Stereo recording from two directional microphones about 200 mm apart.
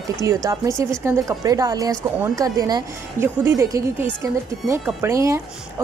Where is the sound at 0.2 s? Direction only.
15° right (ahead or behind).